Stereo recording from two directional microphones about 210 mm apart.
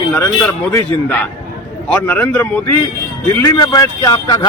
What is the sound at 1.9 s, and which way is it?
Speech, 10° left (ahead or behind).